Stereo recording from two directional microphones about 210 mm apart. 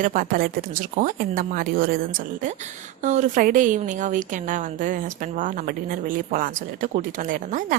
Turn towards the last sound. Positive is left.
turn(degrees=-40)  # may be behind; listen again after turning